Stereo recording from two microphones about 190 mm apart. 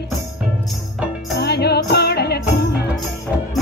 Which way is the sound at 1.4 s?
60° left (ahead or behind).